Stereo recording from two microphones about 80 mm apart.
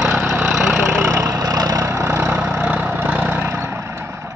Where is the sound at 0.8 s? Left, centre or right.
Right.